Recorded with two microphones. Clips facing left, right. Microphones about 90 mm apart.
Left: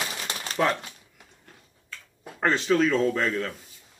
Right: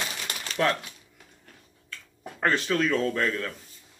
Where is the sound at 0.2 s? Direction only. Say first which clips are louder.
Left 2 dB; 35° left (ahead or behind).